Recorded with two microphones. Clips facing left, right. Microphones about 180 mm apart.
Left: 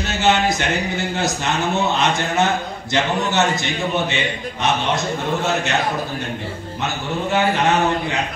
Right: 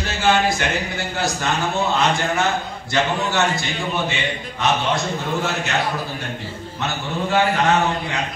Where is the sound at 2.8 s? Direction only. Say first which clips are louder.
Left 1 dB; 20° left (ahead or behind).